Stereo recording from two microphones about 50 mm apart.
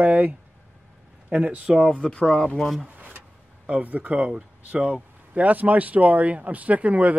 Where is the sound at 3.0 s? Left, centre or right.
Right.